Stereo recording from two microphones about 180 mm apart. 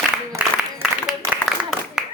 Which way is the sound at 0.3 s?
5° right (ahead or behind).